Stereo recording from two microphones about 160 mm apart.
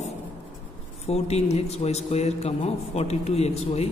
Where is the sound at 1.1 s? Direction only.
40° left (ahead or behind).